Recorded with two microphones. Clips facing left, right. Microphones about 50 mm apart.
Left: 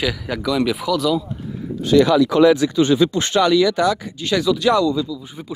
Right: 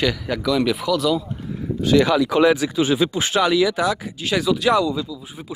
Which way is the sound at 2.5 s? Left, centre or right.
Centre.